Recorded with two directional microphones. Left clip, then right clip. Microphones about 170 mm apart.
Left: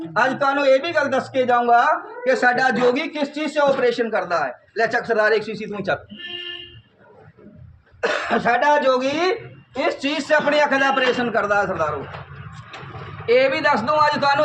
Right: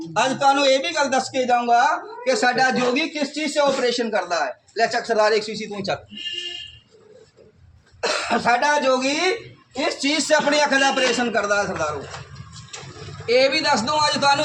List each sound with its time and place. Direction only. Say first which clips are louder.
0.0 s a man's voice: even; centre (ahead or behind); by 6.0 s 20° left (ahead or behind)
8.0 s speech: left 1 dB; 35° left (ahead or behind)
9.7 s a man's voice: even; 10° left (ahead or behind)
13.2 s a man's voice: left 1 dB; 5° right (ahead or behind)